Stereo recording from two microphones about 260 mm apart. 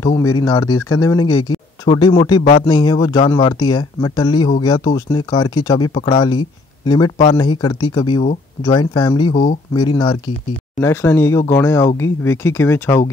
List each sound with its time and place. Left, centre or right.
0.0 s speech: centre